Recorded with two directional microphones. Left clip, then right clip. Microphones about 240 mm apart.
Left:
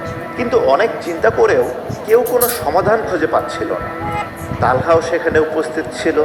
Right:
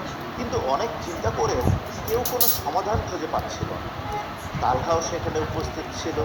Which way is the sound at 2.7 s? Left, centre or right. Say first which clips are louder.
Left 12 dB; left.